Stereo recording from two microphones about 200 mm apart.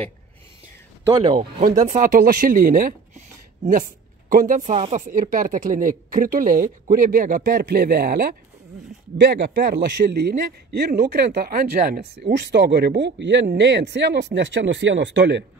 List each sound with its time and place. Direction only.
1.0 s speech: 20° right (ahead or behind)
1.6 s speech: 40° right (ahead or behind)
5.0 s a man's voice: 45° right (ahead or behind); by 15.4 s 60° right (ahead or behind)